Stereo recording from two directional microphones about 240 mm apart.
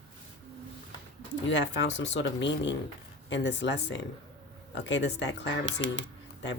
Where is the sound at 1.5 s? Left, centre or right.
Left.